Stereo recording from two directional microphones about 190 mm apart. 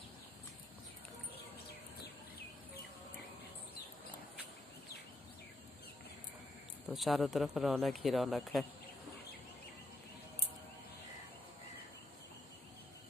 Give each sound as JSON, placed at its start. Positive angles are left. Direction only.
{"t": 6.9, "sound": "speech", "side_deg": 0}